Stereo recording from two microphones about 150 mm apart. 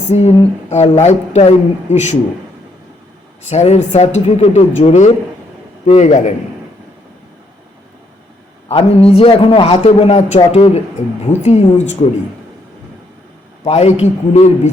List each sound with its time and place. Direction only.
0.1 s speech: 45° left (ahead or behind)
3.4 s speech: 50° left (ahead or behind)
8.7 s a man's voice: 40° left (ahead or behind)
13.7 s speech: 50° left (ahead or behind)